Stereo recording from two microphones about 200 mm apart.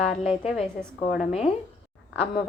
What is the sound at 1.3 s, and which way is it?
Speech, 30° left (ahead or behind).